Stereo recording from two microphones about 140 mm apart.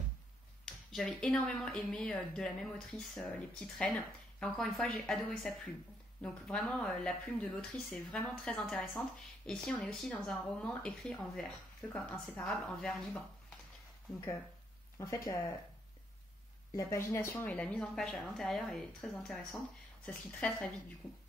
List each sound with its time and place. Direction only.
0.7 s speech: 5° left (ahead or behind)
15.0 s speech: 20° left (ahead or behind)
16.7 s speech: 20° left (ahead or behind)